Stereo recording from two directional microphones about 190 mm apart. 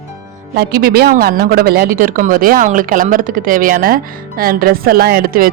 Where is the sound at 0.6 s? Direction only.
55° right (ahead or behind).